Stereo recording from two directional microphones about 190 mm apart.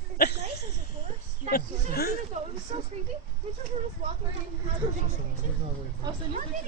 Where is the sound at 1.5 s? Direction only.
55° left (ahead or behind).